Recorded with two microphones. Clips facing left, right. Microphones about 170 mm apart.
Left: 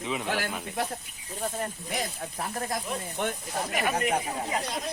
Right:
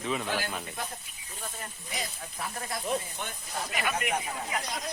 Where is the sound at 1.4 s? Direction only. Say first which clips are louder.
Left 10 dB; 50° left (ahead or behind).